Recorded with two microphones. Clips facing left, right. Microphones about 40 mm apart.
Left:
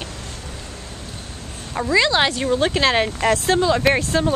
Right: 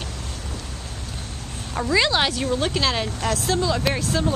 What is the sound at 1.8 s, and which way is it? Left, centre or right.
Speech, centre.